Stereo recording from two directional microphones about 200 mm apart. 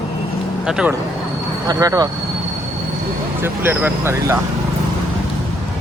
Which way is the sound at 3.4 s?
10° right (ahead or behind).